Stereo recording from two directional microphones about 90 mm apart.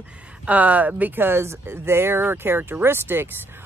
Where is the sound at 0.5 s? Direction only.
20° right (ahead or behind).